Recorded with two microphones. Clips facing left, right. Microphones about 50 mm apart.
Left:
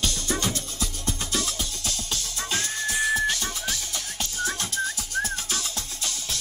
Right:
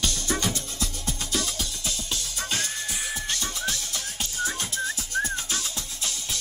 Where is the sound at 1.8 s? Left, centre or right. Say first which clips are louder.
Even; centre.